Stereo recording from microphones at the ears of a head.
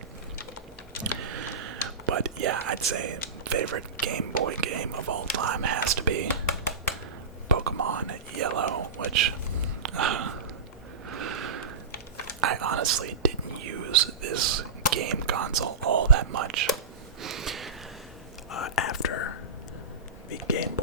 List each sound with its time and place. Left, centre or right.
1.2 s speech: right
7.4 s whispering: right
9.8 s a sound: right
11.1 s snort: right
12.4 s whispering: right
17.2 s a sound: right
18.5 s whispering: left